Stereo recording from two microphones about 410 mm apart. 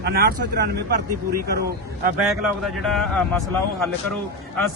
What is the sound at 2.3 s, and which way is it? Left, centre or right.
Speech, centre.